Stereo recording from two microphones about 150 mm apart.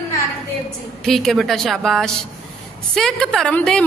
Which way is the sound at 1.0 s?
Centre (ahead or behind).